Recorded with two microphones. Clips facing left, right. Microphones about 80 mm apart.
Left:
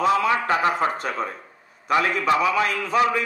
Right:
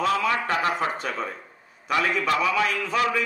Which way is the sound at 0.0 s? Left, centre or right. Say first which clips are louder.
Left 3 dB; centre.